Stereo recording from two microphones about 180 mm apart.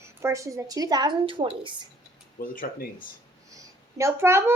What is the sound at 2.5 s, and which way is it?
Speech, 50° left (ahead or behind).